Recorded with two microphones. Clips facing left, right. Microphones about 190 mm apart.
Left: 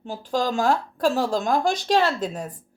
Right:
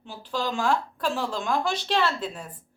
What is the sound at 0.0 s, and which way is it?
A woman's voice, 45° left (ahead or behind).